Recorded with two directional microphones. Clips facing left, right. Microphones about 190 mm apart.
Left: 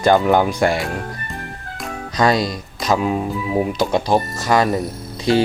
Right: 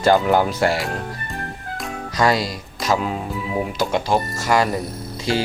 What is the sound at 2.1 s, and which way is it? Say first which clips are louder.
Speech: left 2 dB; 20° left (ahead or behind).